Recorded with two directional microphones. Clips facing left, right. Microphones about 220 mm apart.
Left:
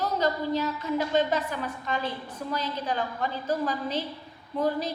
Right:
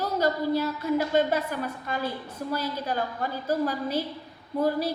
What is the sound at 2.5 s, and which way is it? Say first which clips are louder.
Speech: right 1 dB; 10° right (ahead or behind).